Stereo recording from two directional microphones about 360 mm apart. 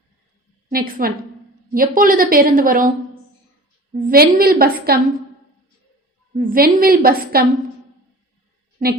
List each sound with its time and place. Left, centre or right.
0.7 s a woman's voice: right
3.9 s a woman's voice: right
6.3 s a woman's voice: right